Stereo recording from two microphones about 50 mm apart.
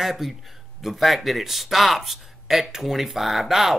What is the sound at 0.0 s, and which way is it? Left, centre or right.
Speech, centre.